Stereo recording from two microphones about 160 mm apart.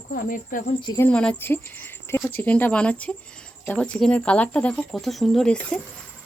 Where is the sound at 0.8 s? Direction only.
25° left (ahead or behind).